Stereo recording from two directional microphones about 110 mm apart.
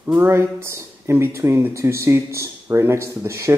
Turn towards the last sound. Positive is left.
turn(degrees=-25)  # may be behind; listen again after turning